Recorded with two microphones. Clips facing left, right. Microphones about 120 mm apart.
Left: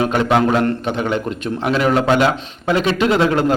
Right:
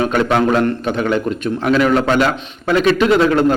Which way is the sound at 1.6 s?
25° left (ahead or behind).